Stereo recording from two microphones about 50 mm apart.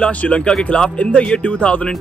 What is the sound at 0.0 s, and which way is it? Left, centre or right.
Speech, left.